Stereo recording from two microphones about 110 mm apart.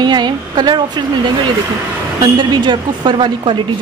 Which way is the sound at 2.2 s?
45° right (ahead or behind).